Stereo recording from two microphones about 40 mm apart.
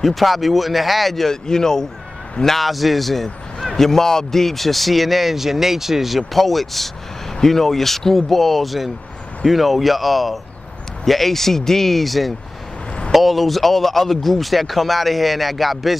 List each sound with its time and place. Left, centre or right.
0.0 s speech: centre